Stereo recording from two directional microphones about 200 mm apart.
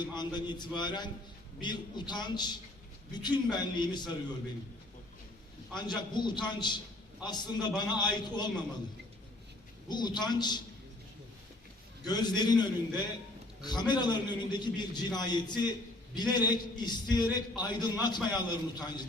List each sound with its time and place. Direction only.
0.0 s a man's voice: 20° left (ahead or behind)
5.7 s a man's voice: 20° left (ahead or behind)
9.9 s a man's voice: 20° left (ahead or behind)
12.0 s a man's voice: 20° left (ahead or behind)